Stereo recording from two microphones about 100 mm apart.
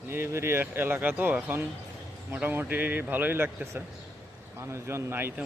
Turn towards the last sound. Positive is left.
turn(degrees=-25)  # may be behind; listen again after turning